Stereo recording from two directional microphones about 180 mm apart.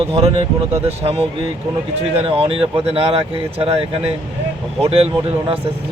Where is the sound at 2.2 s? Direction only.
30° right (ahead or behind).